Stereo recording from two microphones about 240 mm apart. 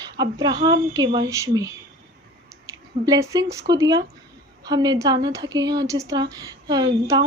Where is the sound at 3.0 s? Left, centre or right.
Centre.